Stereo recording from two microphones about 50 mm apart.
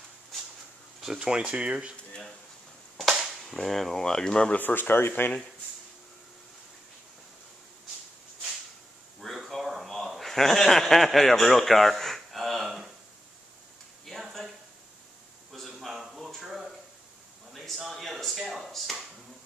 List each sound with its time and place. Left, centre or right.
1.0 s speech: centre
1.4 s speech: right
3.6 s speech: centre
4.6 s speech: left
9.2 s a sound: centre
15.5 s a sound: centre